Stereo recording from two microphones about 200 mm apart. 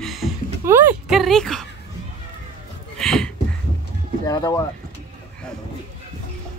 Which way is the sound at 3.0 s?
5° left (ahead or behind).